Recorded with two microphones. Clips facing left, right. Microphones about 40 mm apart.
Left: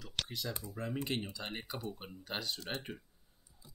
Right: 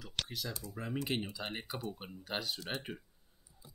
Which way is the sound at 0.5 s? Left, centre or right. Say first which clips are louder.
Left 2 dB; left.